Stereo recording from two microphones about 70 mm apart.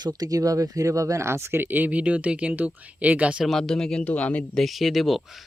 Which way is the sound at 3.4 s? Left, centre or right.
Centre.